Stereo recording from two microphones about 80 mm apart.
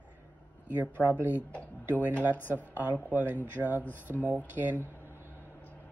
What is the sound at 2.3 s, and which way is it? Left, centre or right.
Speech, left.